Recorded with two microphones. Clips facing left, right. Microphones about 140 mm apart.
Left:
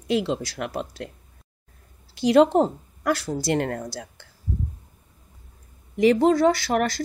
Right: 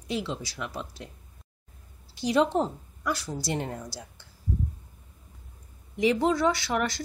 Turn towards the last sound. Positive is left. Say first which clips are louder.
# left 6 dB
turn(degrees=45)  # may be behind; listen again after turning